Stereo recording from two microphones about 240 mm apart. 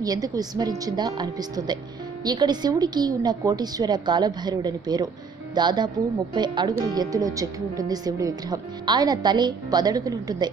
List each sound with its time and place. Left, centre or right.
0.0 s a woman's voice: centre